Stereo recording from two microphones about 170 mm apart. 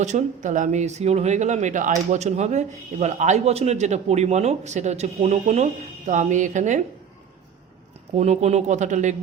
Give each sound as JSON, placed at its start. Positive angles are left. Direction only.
{"t": 0.0, "sound": "speech", "side_deg": -45}
{"t": 8.1, "sound": "speech", "side_deg": -40}